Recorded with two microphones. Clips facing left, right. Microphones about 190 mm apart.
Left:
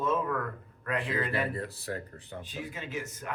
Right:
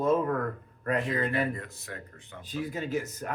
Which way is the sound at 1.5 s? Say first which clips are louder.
Left 5 dB; 35° left (ahead or behind).